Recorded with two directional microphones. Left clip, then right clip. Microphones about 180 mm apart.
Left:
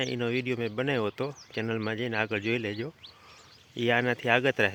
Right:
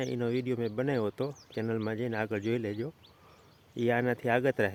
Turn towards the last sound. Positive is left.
turn(degrees=-5)  # may be behind; listen again after turning